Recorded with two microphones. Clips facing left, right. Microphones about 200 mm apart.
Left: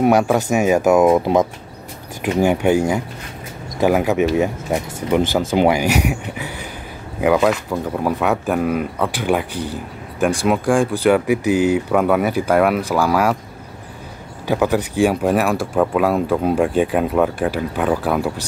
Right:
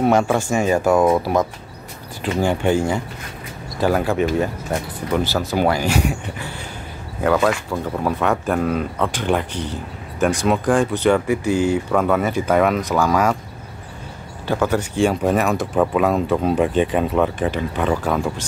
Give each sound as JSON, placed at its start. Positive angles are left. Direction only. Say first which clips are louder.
{"t": 0.0, "sound": "speech", "louder": "left 2 dB", "side_deg": 10}
{"t": 2.2, "sound": "speech", "louder": "left 3 dB", "side_deg": 10}
{"t": 5.2, "sound": "speech", "louder": "left 4 dB", "side_deg": 50}
{"t": 5.6, "sound": "speech", "louder": "left 2 dB", "side_deg": 15}
{"t": 14.5, "sound": "speech", "louder": "left 2 dB", "side_deg": 10}
{"t": 15.6, "sound": "speech", "louder": "left 1 dB", "side_deg": 0}